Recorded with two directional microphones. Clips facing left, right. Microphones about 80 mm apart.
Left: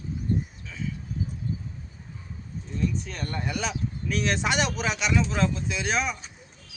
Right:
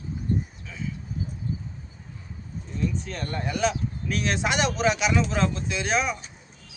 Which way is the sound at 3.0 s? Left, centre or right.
Centre.